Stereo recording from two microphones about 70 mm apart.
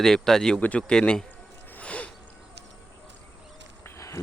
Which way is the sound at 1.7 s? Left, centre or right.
Left.